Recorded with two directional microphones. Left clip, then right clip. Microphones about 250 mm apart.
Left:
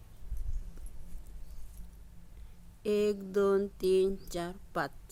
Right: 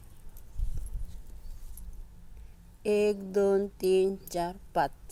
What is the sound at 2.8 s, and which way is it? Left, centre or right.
Speech, centre.